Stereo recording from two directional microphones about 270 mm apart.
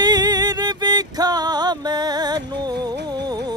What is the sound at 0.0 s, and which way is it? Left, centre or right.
Music, centre.